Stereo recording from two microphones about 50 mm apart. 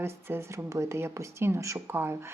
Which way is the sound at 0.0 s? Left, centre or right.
Right.